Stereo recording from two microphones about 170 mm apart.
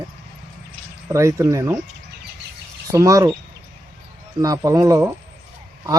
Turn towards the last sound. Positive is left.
turn(degrees=-15)  # may be behind; listen again after turning